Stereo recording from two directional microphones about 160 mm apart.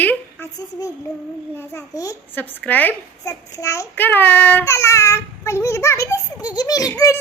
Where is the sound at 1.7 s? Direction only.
20° left (ahead or behind).